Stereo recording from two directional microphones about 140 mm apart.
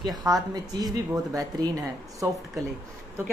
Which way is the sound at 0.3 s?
25° right (ahead or behind).